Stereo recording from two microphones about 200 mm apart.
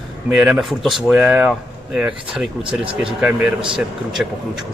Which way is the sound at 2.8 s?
25° right (ahead or behind).